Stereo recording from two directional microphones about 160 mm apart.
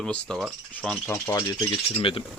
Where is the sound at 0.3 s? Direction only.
5° right (ahead or behind).